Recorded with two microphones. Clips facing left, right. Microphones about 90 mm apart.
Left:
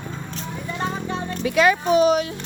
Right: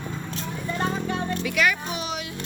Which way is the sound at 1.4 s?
30° left (ahead or behind).